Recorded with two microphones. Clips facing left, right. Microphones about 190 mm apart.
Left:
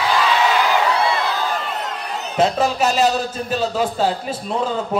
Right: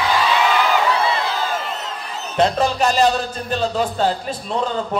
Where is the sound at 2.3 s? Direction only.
5° left (ahead or behind).